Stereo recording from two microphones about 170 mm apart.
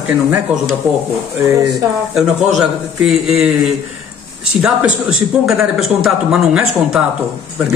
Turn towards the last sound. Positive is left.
turn(degrees=-5)  # may be behind; listen again after turning